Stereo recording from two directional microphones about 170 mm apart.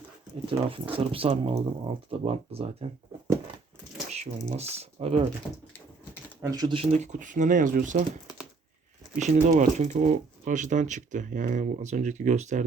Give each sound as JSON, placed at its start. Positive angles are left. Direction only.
{"t": 0.7, "sound": "speech", "side_deg": -30}
{"t": 4.1, "sound": "speech", "side_deg": -40}
{"t": 6.4, "sound": "speech", "side_deg": -20}
{"t": 6.9, "sound": "speech", "side_deg": -45}
{"t": 9.1, "sound": "speech", "side_deg": -45}